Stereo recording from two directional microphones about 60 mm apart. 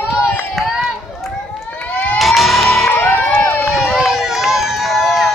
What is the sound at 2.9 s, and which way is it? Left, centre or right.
Run, left.